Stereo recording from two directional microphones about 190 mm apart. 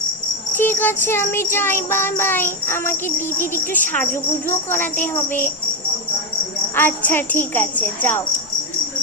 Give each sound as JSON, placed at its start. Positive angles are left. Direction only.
{"t": 0.5, "sound": "music", "side_deg": 10}
{"t": 6.7, "sound": "music", "side_deg": 10}